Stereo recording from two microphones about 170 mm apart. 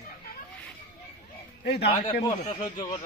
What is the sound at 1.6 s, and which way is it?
Speech, 90° left.